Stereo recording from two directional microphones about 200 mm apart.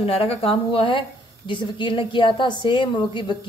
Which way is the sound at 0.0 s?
30° left (ahead or behind).